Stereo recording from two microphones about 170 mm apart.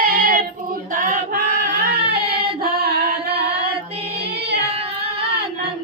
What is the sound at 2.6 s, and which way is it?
Singing, 70° right (ahead or behind).